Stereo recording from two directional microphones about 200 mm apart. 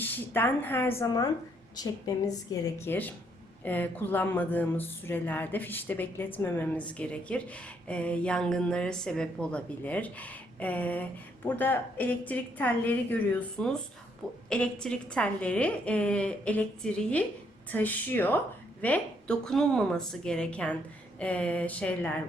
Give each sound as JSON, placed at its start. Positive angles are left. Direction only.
{"t": 0.0, "sound": "a woman's voice", "side_deg": 10}